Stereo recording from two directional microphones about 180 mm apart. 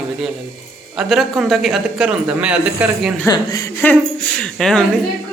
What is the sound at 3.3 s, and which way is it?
Speech, 20° left (ahead or behind).